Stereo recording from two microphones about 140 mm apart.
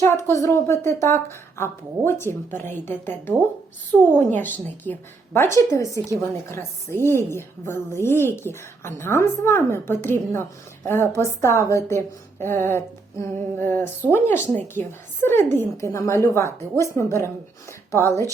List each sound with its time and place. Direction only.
0.0 s a woman's voice: 20° left (ahead or behind)